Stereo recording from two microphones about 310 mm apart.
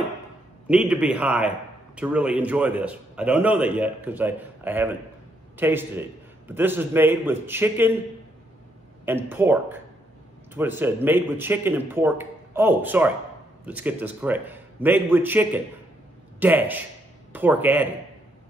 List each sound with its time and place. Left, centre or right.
0.7 s a man's voice: centre
9.0 s a man's voice: centre